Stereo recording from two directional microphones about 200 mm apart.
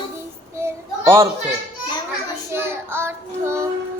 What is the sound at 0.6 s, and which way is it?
Child singing, 15° right (ahead or behind).